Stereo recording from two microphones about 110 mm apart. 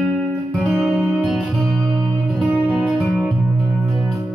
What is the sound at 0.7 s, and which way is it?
Music, centre (ahead or behind).